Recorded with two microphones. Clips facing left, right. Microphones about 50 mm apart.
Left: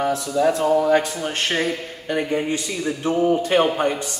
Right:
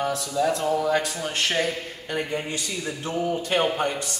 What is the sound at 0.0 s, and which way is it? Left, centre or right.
Speech, left.